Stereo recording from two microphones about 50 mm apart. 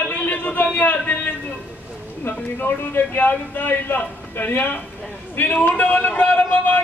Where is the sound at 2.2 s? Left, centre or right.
Left.